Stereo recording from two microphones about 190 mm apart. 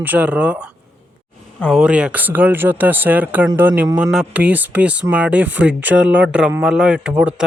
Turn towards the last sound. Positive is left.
turn(degrees=-5)  # may be behind; listen again after turning